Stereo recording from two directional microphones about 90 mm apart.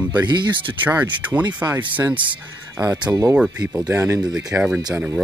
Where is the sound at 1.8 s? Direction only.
20° right (ahead or behind).